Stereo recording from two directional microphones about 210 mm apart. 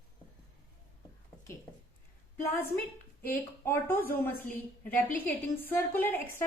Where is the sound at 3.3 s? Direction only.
10° left (ahead or behind).